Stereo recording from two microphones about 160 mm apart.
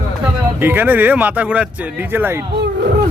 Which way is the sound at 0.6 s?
10° right (ahead or behind).